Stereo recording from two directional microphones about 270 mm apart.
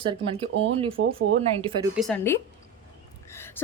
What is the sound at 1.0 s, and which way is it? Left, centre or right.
Speech, right.